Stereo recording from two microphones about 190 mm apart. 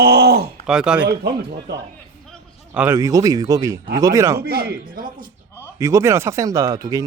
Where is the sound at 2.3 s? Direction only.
5° right (ahead or behind).